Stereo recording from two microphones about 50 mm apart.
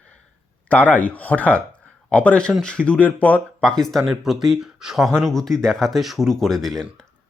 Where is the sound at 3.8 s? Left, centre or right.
Centre.